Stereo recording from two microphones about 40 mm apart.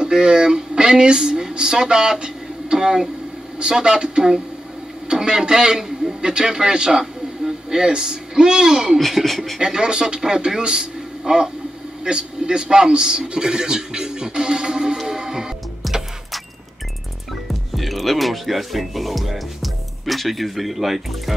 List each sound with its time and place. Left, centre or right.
0.0 s a man's voice: centre
8.9 s speech: centre
9.6 s a man's voice: centre
15.0 s music: centre
15.8 s music: centre
17.7 s speech: centre